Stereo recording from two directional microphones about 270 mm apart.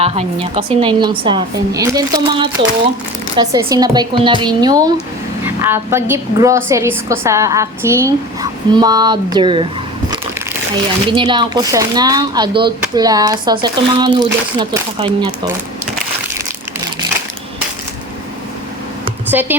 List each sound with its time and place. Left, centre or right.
0.0 s speech: right
11.1 s speech: centre
19.3 s speech: centre